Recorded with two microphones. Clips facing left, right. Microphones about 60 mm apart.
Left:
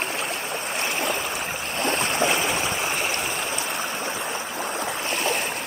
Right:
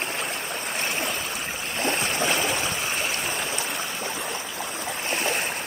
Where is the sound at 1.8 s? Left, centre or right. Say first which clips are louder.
Left 2 dB; left.